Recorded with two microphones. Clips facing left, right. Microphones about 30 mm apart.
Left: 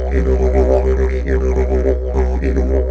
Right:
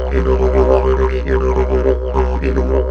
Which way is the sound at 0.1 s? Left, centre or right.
Right.